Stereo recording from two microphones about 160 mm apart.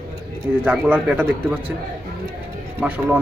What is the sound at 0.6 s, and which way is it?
Speech, 10° right (ahead or behind).